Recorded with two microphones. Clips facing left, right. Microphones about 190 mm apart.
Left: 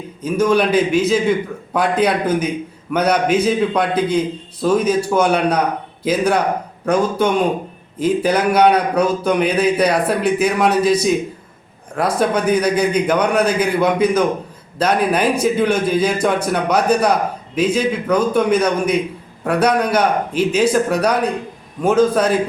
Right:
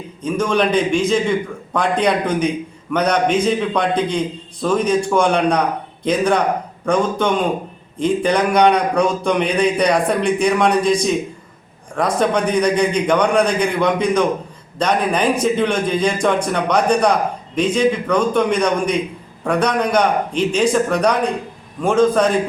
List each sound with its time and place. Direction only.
0.2 s a man's voice: 5° left (ahead or behind)